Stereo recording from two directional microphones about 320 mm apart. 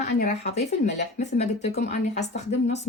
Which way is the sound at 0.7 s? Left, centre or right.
Left.